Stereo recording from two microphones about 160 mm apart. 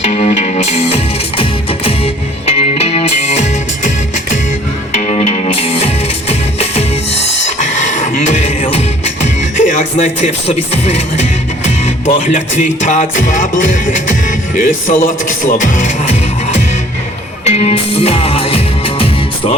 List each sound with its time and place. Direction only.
0.0 s music: 45° left (ahead or behind)
4.9 s music: 45° left (ahead or behind)
9.2 s speech: 50° left (ahead or behind)
17.4 s music: 40° left (ahead or behind)